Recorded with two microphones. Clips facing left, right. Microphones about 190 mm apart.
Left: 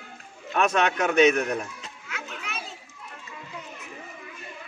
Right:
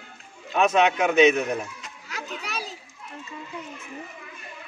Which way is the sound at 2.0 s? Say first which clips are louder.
Right 3 dB; 35° right (ahead or behind).